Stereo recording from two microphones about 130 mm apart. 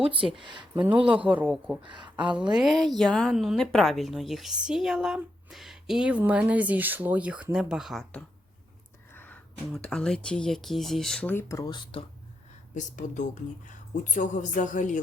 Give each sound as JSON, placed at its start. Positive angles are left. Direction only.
{"t": 0.0, "sound": "speech", "side_deg": -45}
{"t": 1.1, "sound": "a woman's voice", "side_deg": -10}
{"t": 1.8, "sound": "speech", "side_deg": -35}
{"t": 2.1, "sound": "a woman's voice", "side_deg": -10}
{"t": 9.1, "sound": "a sound", "side_deg": 15}
{"t": 9.7, "sound": "a woman's voice", "side_deg": 5}
{"t": 11.3, "sound": "speech", "side_deg": 20}
{"t": 12.7, "sound": "a woman's voice", "side_deg": 70}